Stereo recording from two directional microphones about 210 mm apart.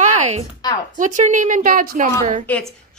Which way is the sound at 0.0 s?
35° right (ahead or behind).